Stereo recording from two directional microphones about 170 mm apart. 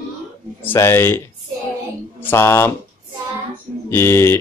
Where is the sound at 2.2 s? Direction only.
15° left (ahead or behind).